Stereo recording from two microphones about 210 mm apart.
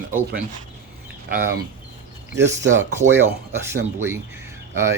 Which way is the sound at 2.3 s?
55° right (ahead or behind).